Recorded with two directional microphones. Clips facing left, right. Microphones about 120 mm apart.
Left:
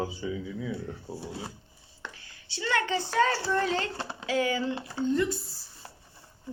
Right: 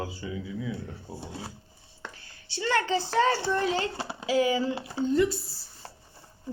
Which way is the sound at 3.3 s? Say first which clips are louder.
Right 2 dB; 20° right (ahead or behind).